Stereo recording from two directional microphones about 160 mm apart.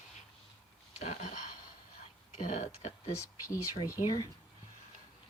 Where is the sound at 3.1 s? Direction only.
20° left (ahead or behind).